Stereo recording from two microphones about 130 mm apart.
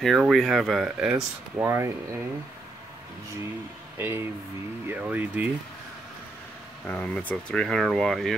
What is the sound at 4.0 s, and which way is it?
Speech, 20° right (ahead or behind).